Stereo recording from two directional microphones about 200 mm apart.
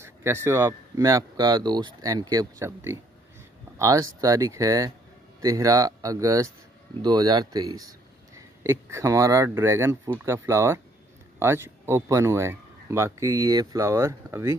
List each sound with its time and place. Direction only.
0.0 s speech: 15° right (ahead or behind)